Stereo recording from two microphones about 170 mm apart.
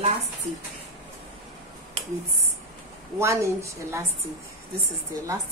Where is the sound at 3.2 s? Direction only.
15° right (ahead or behind).